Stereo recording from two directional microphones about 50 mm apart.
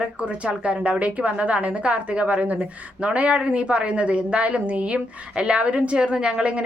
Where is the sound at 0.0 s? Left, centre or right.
Right.